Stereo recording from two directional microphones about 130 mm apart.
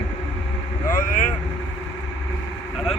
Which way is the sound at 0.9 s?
90° left.